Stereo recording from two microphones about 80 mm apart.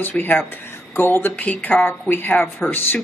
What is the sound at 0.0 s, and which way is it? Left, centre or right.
Speech, left.